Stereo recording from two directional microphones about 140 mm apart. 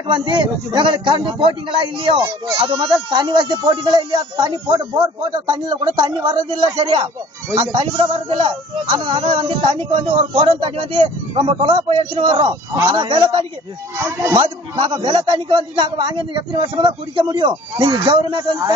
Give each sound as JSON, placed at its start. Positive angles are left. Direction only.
{"t": 0.0, "sound": "a man's voice", "side_deg": -35}
{"t": 13.9, "sound": "speech", "side_deg": -20}
{"t": 14.9, "sound": "a man's voice", "side_deg": -35}